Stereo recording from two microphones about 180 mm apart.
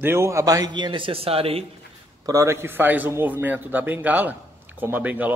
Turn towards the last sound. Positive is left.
turn(degrees=-10)  # may be behind; listen again after turning